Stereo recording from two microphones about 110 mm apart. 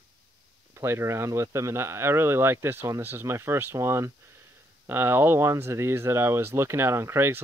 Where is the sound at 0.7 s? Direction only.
25° right (ahead or behind).